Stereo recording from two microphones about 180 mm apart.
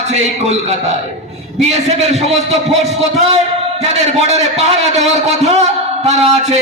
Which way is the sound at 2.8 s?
35° right (ahead or behind).